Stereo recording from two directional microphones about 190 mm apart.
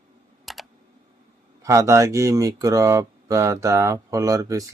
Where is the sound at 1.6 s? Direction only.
15° right (ahead or behind).